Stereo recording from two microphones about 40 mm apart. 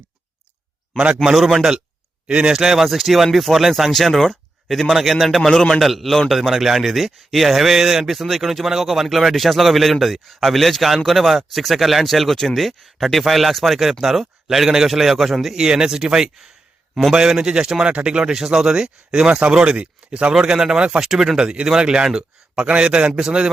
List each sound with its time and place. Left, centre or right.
1.5 s a man's voice: centre
2.2 s speech: right
2.5 s speech: centre
5.4 s a man's voice: centre
5.8 s a man's voice: centre
15.5 s a man's voice: centre
20.3 s speech: centre
21.0 s a man's voice: centre